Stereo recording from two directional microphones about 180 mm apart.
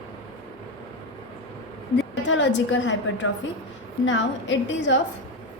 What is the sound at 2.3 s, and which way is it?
A woman's voice, 90° left.